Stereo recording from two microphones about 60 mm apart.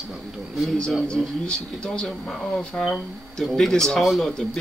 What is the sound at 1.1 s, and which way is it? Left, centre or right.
Speech, centre.